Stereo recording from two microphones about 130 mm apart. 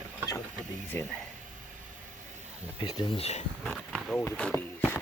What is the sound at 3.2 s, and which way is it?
Speech, 55° left (ahead or behind).